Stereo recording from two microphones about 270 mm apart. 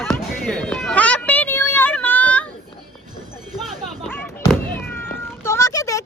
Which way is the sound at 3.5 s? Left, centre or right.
Centre.